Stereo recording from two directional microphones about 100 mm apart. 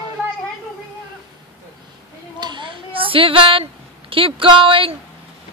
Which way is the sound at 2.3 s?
50° right (ahead or behind).